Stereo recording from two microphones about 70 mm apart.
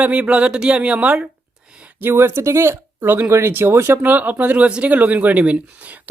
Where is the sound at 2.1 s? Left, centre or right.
Right.